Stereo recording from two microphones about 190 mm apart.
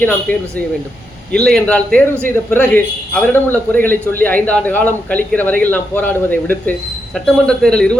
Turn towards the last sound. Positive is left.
turn(degrees=5)  # may be behind; listen again after turning